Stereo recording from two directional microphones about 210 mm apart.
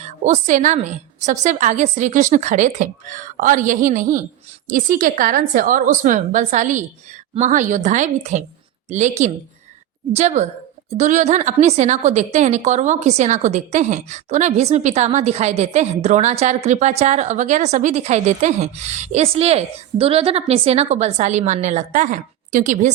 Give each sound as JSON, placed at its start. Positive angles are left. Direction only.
{"t": 0.0, "sound": "a woman's voice", "side_deg": -35}